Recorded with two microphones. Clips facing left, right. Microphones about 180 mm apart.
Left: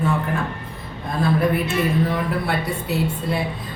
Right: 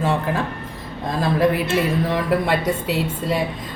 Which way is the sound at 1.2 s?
90° right.